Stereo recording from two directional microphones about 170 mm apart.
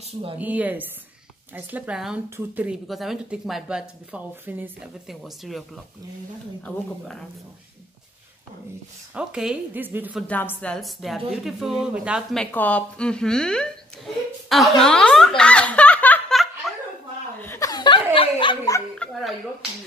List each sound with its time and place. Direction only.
0.4 s a woman's voice: 10° right (ahead or behind)
9.1 s speech: 5° right (ahead or behind)
10.2 s a woman's voice: 10° left (ahead or behind)
14.5 s snicker: centre (ahead or behind)
17.4 s chuckle: 15° left (ahead or behind)
18.1 s a sound: 30° left (ahead or behind)
19.0 s a sound: 5° left (ahead or behind)